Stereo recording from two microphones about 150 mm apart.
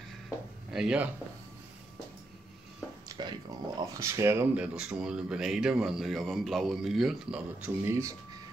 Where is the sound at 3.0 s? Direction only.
30° right (ahead or behind).